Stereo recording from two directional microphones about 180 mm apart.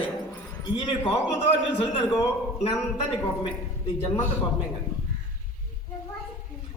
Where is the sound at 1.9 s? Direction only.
25° left (ahead or behind).